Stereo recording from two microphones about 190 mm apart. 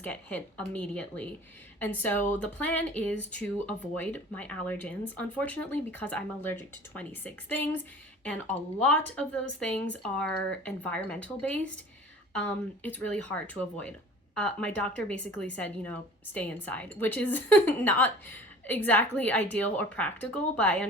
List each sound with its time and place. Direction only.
0.0 s a woman's voice: 10° left (ahead or behind)